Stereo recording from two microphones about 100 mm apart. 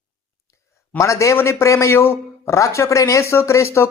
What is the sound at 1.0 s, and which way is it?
A man's voice, 30° left (ahead or behind).